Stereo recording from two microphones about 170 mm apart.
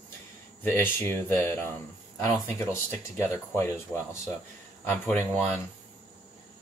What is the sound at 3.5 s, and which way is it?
Speech, 15° left (ahead or behind).